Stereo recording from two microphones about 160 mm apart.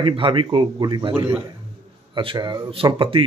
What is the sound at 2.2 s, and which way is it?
A man's voice, 30° right (ahead or behind).